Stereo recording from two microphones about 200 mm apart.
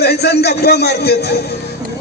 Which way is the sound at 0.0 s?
55° left (ahead or behind).